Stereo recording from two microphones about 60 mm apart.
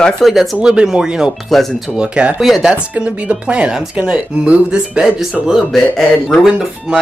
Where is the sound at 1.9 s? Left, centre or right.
Centre.